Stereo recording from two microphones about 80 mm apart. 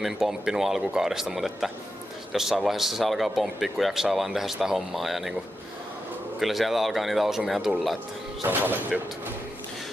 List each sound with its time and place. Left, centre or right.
0.0 s speech: centre
6.4 s speech: centre
8.5 s speech: right